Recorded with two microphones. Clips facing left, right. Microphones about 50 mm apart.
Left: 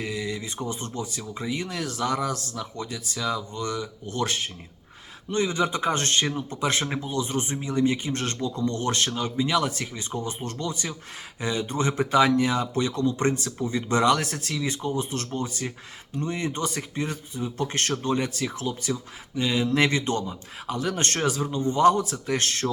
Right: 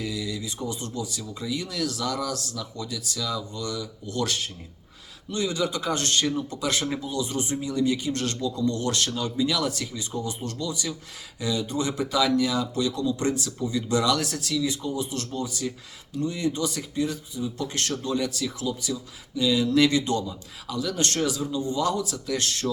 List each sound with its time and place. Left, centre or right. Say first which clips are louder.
0.0 s a man's voice: left 1 dB; left